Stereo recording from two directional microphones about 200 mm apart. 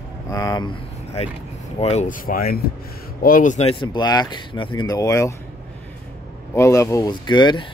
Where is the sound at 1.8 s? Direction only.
35° left (ahead or behind).